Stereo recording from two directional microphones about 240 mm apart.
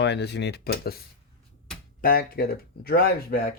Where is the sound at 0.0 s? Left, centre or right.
Left.